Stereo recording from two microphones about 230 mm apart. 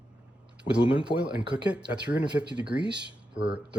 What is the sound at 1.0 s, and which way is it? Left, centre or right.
Speech, centre.